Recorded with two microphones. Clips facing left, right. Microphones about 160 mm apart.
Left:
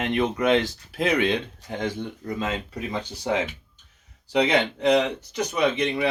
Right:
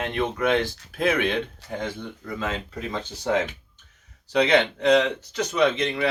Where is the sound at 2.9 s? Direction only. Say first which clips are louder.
Right 1 dB; 10° left (ahead or behind).